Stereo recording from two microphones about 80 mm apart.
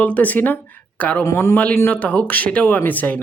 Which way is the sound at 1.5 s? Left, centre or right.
Centre.